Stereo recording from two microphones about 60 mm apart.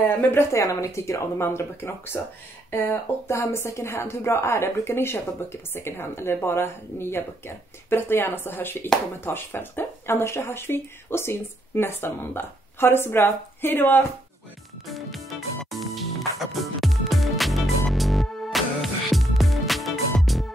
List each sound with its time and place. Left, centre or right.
0.0 s speech: left
0.5 s speech: left
3.3 s a woman's voice: left
14.9 s music: centre